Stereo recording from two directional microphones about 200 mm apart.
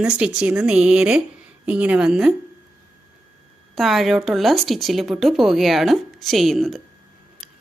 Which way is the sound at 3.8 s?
Centre (ahead or behind).